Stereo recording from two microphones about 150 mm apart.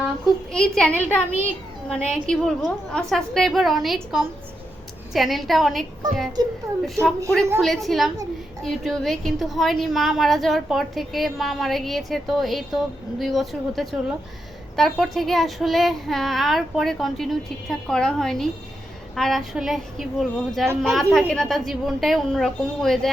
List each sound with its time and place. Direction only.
0.5 s a woman's voice: 5° left (ahead or behind)
6.8 s a woman's voice: centre (ahead or behind)